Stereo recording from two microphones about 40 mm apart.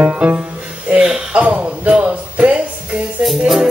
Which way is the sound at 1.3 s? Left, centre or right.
Right.